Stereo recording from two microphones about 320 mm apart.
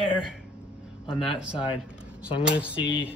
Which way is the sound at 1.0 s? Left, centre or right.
Centre.